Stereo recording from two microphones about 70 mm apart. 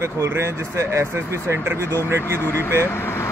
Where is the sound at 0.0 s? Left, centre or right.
Right.